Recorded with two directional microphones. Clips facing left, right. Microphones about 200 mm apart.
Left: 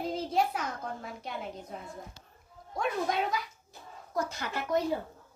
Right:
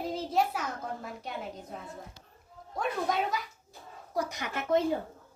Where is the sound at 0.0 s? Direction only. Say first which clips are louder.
Even; 5° right (ahead or behind).